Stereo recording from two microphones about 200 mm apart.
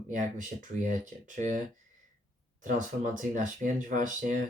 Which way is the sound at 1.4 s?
40° right (ahead or behind).